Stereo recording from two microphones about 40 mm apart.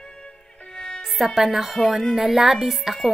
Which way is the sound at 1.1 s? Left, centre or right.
Centre.